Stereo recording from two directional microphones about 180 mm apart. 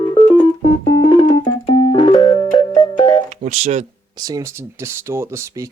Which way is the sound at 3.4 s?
35° right (ahead or behind).